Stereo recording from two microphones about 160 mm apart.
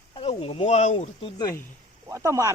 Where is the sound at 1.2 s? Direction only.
20° left (ahead or behind).